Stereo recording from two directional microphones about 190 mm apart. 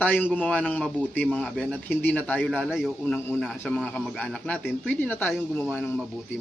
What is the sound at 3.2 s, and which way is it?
A man's voice, 10° left (ahead or behind).